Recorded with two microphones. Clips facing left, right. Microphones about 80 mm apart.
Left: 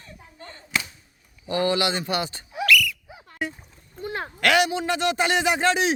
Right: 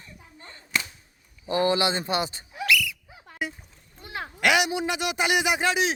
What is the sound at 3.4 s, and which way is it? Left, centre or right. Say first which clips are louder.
Speech: left 2 dB; centre.